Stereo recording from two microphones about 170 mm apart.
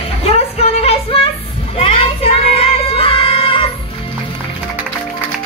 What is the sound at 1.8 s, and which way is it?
Music, 35° left (ahead or behind).